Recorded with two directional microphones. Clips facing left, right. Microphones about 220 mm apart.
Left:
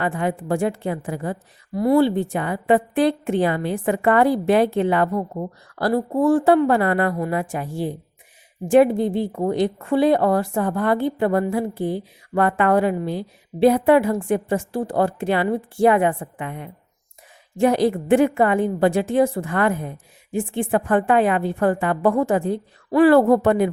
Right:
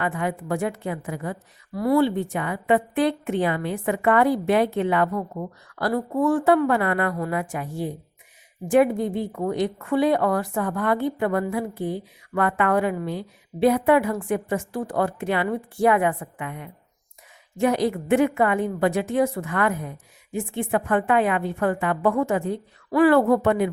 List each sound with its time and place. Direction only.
0.0 s a woman's voice: 30° left (ahead or behind)